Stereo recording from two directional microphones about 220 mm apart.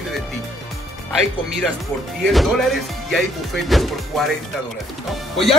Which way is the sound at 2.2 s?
Centre (ahead or behind).